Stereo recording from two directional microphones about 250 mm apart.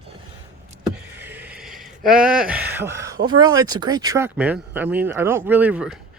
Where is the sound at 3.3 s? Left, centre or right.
Centre.